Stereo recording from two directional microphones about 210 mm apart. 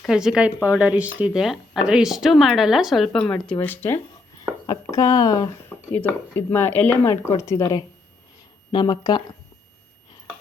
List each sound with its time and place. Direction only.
0.0 s speech: 5° right (ahead or behind); by 9.2 s 20° left (ahead or behind)